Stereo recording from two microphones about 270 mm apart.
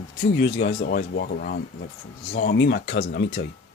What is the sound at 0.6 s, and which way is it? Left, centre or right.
Speech, left.